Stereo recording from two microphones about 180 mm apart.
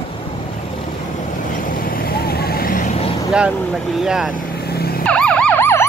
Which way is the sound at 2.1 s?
60° left (ahead or behind).